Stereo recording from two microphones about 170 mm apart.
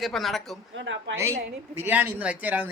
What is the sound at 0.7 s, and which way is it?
Speech, 90° right.